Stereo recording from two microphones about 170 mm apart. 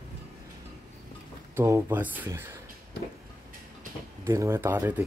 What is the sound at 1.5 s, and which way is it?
Speech, 15° right (ahead or behind).